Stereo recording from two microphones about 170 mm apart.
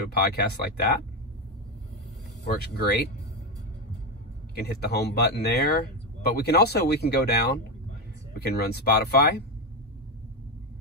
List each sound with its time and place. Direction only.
0.1 s speech: 65° left (ahead or behind)
2.4 s speech: 75° left (ahead or behind)
4.6 s speech: 70° left (ahead or behind)